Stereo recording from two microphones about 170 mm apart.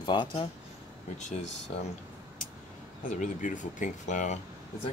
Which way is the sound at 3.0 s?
50° left (ahead or behind).